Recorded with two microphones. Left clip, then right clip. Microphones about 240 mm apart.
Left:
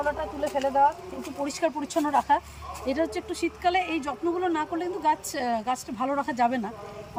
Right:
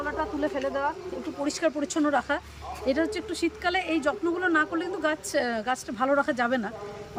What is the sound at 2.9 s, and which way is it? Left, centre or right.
Speech, centre.